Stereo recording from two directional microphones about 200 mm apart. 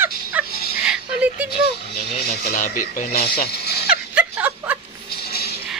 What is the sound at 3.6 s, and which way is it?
Dog, 55° left (ahead or behind).